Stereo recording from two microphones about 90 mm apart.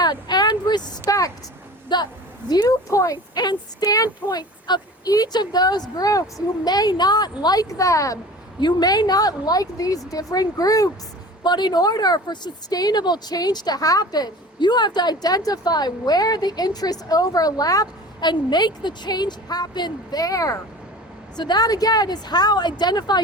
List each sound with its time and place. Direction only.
0.0 s speech: 50° left (ahead or behind)
1.9 s a woman's voice: 55° left (ahead or behind)
2.6 s speech: 40° left (ahead or behind)
8.6 s speech: 50° left (ahead or behind)
11.4 s speech: 55° left (ahead or behind)
21.3 s speech: 50° left (ahead or behind)